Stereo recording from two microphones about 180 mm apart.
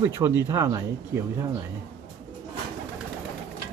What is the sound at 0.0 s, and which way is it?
Speech, 15° right (ahead or behind).